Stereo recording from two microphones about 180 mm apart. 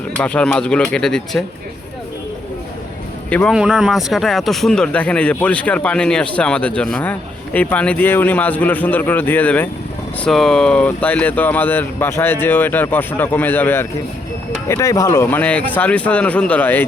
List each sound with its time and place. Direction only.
0.2 s speech: 5° left (ahead or behind)
3.2 s a man's voice: 10° left (ahead or behind)
3.5 s speech: 5° right (ahead or behind)